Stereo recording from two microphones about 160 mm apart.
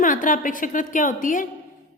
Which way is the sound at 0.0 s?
55° left (ahead or behind).